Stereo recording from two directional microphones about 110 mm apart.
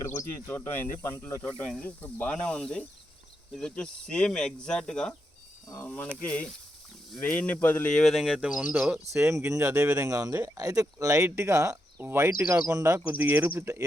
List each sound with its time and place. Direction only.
0.2 s speech: 25° left (ahead or behind); by 5.1 s 5° left (ahead or behind)
5.8 s speech: 15° left (ahead or behind); by 9.2 s 5° right (ahead or behind)
9.2 s speech: 30° right (ahead or behind)
13.1 s speech: 15° right (ahead or behind)